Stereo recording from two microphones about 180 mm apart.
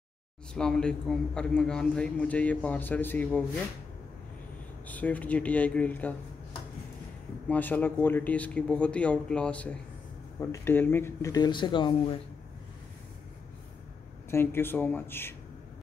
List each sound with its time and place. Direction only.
0.6 s a man's voice: 5° left (ahead or behind)
4.8 s a man's voice: 10° left (ahead or behind)
7.4 s a man's voice: 10° left (ahead or behind); by 12.2 s 25° left (ahead or behind)
14.3 s a man's voice: 10° left (ahead or behind)